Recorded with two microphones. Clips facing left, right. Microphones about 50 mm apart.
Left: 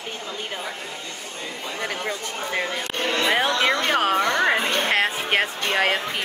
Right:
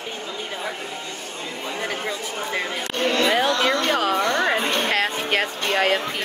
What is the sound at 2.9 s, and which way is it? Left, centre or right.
Speech, left.